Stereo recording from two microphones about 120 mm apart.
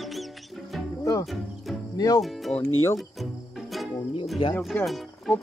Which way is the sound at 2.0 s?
30° left (ahead or behind).